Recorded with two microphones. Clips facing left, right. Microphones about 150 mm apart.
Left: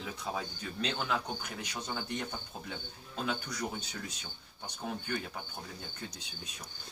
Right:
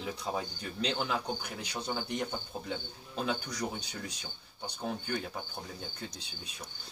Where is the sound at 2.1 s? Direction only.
15° right (ahead or behind).